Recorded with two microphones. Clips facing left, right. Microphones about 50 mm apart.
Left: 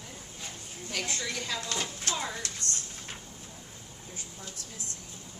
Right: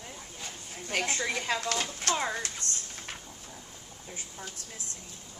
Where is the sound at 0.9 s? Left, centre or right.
Right.